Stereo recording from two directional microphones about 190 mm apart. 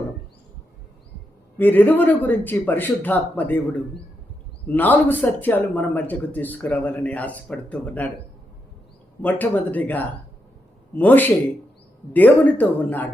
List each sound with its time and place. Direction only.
1.5 s a man's voice: 10° left (ahead or behind)
9.2 s a man's voice: 10° left (ahead or behind)